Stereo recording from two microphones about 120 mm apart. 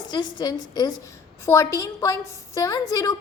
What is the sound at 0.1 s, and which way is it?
A woman's voice, 35° left (ahead or behind).